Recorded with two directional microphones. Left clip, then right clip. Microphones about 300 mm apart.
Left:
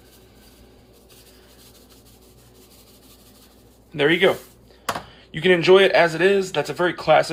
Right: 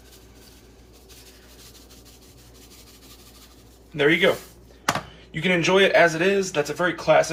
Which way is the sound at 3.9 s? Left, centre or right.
Left.